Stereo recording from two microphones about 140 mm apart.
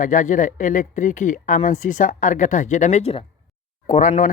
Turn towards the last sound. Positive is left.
turn(degrees=60)  # may be behind; listen again after turning